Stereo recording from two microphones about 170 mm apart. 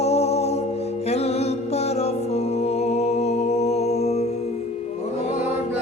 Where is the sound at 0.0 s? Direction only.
40° left (ahead or behind).